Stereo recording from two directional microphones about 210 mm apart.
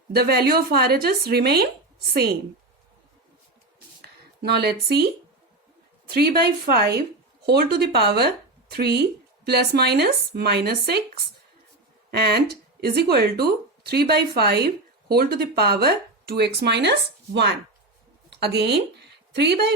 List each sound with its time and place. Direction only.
0.1 s speech: 50° right (ahead or behind)
4.0 s speech: 50° right (ahead or behind)
6.1 s speech: 50° right (ahead or behind)
12.1 s speech: 50° right (ahead or behind)